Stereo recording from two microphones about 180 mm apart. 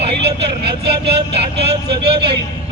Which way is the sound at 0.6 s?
65° right (ahead or behind).